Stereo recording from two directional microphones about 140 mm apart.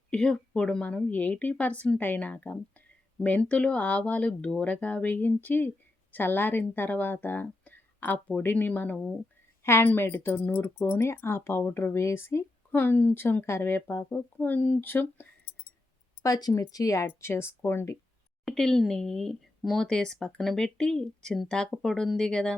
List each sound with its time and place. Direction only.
0.1 s speech: 5° left (ahead or behind)
16.2 s speech: 25° left (ahead or behind)
18.4 s speech: 5° left (ahead or behind)